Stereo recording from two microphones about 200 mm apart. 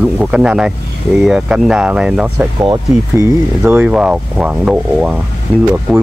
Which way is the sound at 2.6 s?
15° right (ahead or behind).